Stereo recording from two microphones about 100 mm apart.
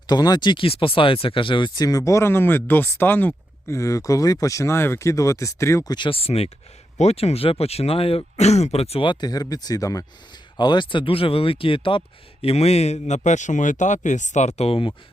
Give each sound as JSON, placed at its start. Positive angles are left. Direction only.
{"t": 0.1, "sound": "speech", "side_deg": 45}
{"t": 3.8, "sound": "speech", "side_deg": 35}
{"t": 5.9, "sound": "speech", "side_deg": 55}
{"t": 9.0, "sound": "speech", "side_deg": 40}
{"t": 10.6, "sound": "speech", "side_deg": 50}
{"t": 14.6, "sound": "speech", "side_deg": 70}